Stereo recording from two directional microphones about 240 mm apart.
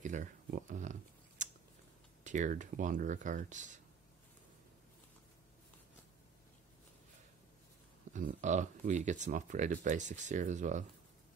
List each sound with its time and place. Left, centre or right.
0.0 s speech: right
1.4 s a sound: right
2.2 s speech: right
8.1 s speech: right